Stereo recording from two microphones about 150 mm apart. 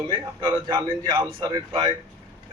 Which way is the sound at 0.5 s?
20° right (ahead or behind).